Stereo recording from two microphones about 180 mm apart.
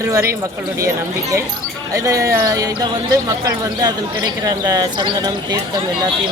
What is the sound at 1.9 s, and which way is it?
Speech, 20° right (ahead or behind).